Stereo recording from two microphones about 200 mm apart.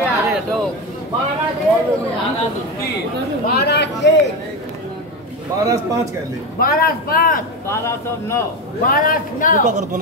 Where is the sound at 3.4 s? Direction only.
55° left (ahead or behind).